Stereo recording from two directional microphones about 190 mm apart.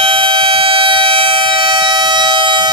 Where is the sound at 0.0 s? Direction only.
25° right (ahead or behind).